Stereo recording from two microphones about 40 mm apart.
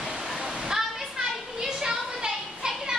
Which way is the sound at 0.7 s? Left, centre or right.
Centre.